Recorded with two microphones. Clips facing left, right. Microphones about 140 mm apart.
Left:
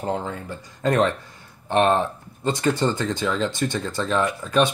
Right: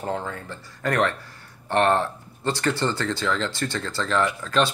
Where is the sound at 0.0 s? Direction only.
20° left (ahead or behind).